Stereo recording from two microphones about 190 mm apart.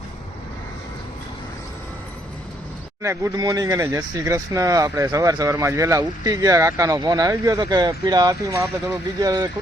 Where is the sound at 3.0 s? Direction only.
15° right (ahead or behind).